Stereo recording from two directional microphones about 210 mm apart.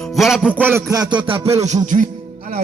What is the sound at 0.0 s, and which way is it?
Music, centre (ahead or behind).